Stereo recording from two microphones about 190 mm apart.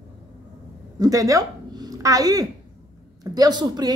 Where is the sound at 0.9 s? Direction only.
20° right (ahead or behind).